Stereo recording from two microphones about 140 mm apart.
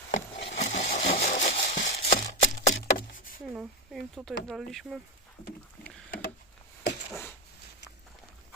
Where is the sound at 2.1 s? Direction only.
65° left (ahead or behind).